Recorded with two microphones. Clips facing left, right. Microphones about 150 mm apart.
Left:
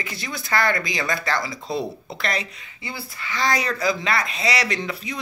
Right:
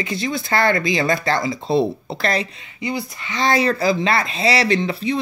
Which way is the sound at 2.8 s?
20° right (ahead or behind).